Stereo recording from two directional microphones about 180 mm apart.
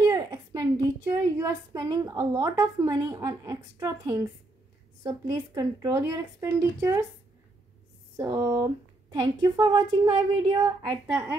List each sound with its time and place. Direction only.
0.0 s a sound: 20° right (ahead or behind)
1.4 s a woman's voice: 20° right (ahead or behind)
8.2 s a woman's voice: 15° right (ahead or behind)